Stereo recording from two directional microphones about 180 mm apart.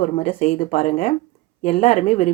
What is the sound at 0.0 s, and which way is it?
Speech, 40° left (ahead or behind).